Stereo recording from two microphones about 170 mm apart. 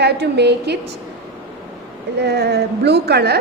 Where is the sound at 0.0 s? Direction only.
75° right (ahead or behind).